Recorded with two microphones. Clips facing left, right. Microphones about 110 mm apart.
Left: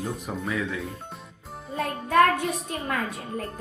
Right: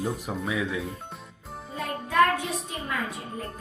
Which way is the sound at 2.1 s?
50° left (ahead or behind).